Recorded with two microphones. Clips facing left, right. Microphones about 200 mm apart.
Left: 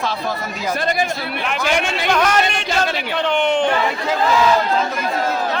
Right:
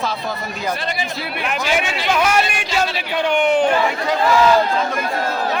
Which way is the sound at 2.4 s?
55° left (ahead or behind).